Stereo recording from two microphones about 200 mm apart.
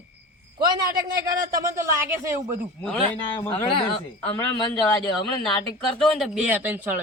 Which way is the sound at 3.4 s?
20° left (ahead or behind).